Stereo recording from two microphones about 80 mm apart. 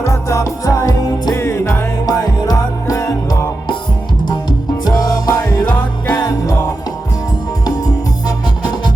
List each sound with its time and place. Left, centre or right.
0.0 s music: left
1.3 s music: left
4.3 s music: left
8.6 s music: left